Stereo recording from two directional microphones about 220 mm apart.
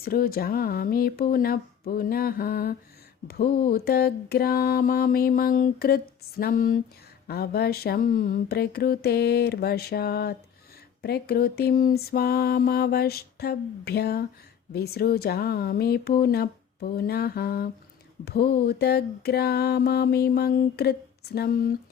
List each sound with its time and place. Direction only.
0.0 s mantra: 45° left (ahead or behind)